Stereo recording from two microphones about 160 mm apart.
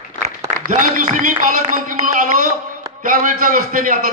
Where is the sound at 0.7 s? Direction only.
55° right (ahead or behind).